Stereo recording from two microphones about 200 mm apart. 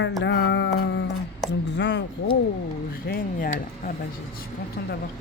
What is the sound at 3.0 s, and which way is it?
Speech, 45° left (ahead or behind).